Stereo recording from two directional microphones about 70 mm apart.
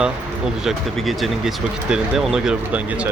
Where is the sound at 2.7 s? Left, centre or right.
Right.